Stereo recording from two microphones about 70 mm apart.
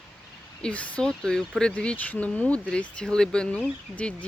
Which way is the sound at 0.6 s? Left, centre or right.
Centre.